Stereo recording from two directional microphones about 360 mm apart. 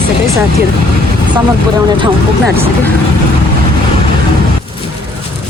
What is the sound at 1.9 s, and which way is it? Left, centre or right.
Speech, centre.